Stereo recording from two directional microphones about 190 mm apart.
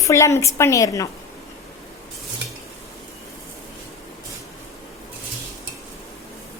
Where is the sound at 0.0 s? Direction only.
15° left (ahead or behind).